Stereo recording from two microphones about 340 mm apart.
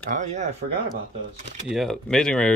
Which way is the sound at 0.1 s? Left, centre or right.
Right.